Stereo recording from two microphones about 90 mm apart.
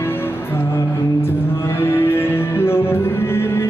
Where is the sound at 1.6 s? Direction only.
25° left (ahead or behind).